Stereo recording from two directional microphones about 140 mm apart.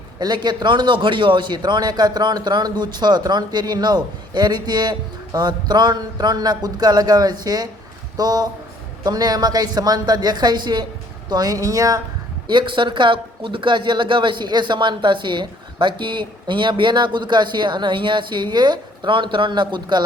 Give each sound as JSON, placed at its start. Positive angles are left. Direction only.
{"t": 0.2, "sound": "a man's voice", "side_deg": -30}